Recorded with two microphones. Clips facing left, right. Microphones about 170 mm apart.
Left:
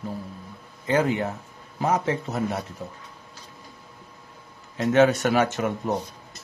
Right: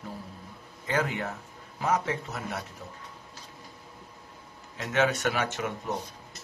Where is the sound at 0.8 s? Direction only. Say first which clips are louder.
Left 7 dB; 25° left (ahead or behind).